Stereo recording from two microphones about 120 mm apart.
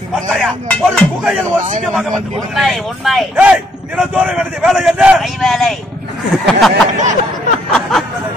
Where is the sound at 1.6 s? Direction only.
80° right.